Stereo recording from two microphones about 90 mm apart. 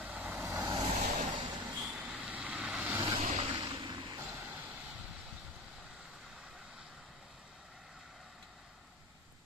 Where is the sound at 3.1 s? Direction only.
60° right (ahead or behind).